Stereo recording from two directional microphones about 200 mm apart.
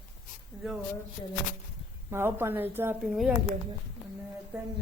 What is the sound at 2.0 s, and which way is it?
A woman's voice, 10° right (ahead or behind).